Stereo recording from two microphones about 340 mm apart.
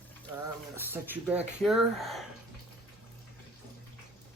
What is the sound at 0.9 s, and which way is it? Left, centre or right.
Speech, centre.